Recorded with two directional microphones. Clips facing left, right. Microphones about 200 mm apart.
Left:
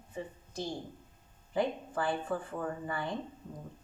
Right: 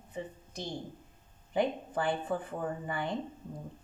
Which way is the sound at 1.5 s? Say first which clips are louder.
Right 2 dB; 20° right (ahead or behind).